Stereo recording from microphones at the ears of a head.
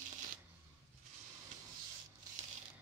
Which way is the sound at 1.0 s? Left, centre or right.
Right.